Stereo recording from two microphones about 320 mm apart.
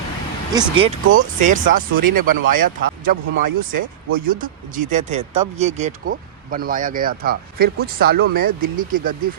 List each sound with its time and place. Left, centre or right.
0.5 s speech: centre